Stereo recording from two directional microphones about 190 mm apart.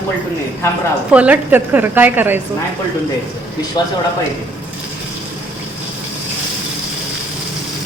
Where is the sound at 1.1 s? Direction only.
5° right (ahead or behind).